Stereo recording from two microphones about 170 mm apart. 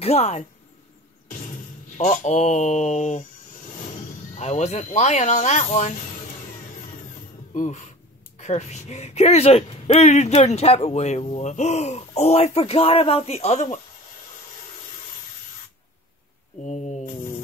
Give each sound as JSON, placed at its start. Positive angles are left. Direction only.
{"t": 0.0, "sound": "speech", "side_deg": 40}
{"t": 2.0, "sound": "speech", "side_deg": 45}
{"t": 4.4, "sound": "speech", "side_deg": 40}
{"t": 7.5, "sound": "speech", "side_deg": 45}
{"t": 16.6, "sound": "a sound", "side_deg": 45}